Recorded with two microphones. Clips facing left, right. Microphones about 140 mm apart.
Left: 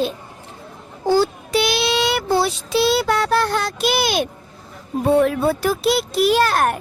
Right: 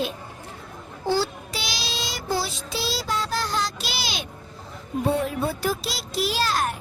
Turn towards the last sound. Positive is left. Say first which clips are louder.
# left 8 dB
turn(degrees=60)  # may be behind; listen again after turning